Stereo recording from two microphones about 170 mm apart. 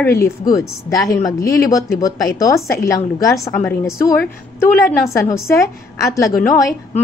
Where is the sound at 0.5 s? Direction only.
20° left (ahead or behind).